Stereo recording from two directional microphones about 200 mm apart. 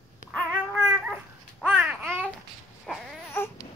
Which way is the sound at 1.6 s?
5° right (ahead or behind).